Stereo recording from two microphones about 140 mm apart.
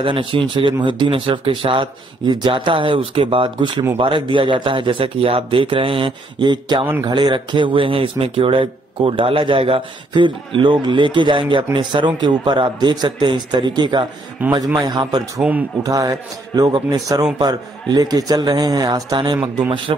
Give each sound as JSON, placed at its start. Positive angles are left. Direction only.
{"t": 0.0, "sound": "speech", "side_deg": -40}
{"t": 14.4, "sound": "a man's voice", "side_deg": -10}
{"t": 14.8, "sound": "a man's voice", "side_deg": -30}